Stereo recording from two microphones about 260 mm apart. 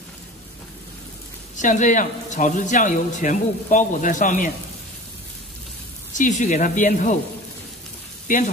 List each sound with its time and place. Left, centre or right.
1.6 s a man's voice: left
6.1 s a man's voice: left
8.3 s speech: left